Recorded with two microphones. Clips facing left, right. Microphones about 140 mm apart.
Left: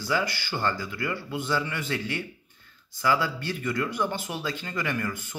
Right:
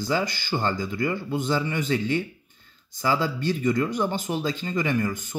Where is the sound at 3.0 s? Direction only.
20° right (ahead or behind).